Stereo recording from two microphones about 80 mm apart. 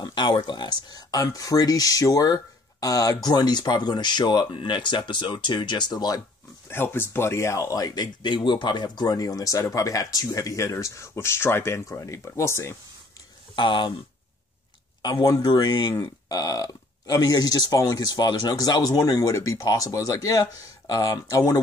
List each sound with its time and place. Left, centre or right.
0.0 s speech: left
6.7 s speech: left
13.6 s speech: left
15.0 s speech: left